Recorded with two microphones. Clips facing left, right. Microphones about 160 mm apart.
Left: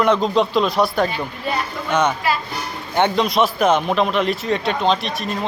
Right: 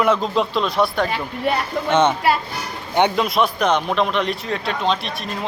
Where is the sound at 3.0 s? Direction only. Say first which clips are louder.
Even; 15° right (ahead or behind).